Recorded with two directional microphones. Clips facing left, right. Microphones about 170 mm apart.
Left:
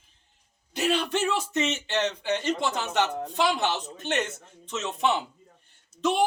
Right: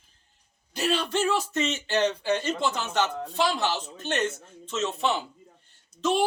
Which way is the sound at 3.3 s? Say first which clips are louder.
Even; 15° left (ahead or behind).